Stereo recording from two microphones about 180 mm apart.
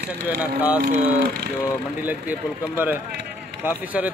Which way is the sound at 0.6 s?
10° right (ahead or behind).